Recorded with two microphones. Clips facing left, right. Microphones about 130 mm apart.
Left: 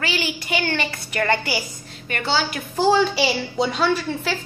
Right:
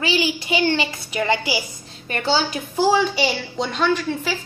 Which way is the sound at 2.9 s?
Centre (ahead or behind).